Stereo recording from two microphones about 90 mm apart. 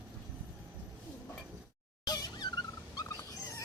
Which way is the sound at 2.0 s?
50° left (ahead or behind).